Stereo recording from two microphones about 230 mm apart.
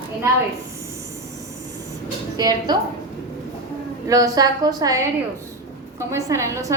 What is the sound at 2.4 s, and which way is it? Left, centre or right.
Speech, centre.